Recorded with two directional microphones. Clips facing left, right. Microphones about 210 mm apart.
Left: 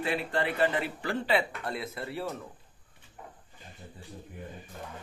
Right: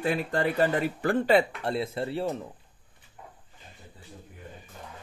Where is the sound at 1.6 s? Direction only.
30° right (ahead or behind).